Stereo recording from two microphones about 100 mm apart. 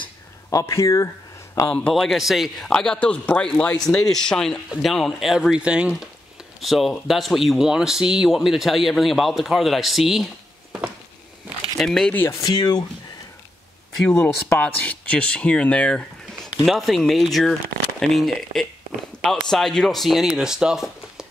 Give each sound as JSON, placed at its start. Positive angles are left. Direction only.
{"t": 0.5, "sound": "speech", "side_deg": 30}
{"t": 1.7, "sound": "speech", "side_deg": 10}
{"t": 11.8, "sound": "speech", "side_deg": 5}
{"t": 12.1, "sound": "speech", "side_deg": 20}
{"t": 12.4, "sound": "speech", "side_deg": 40}
{"t": 14.6, "sound": "speech", "side_deg": 15}